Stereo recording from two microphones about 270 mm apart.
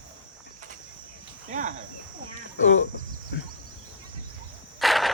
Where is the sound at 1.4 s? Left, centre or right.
Right.